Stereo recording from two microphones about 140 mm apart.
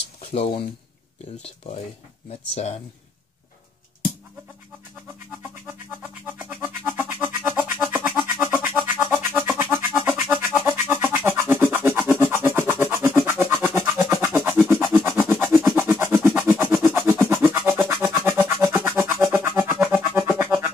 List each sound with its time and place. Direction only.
0.2 s speech: 45° left (ahead or behind)
2.5 s speech: 55° left (ahead or behind)
6.2 s music: 15° right (ahead or behind)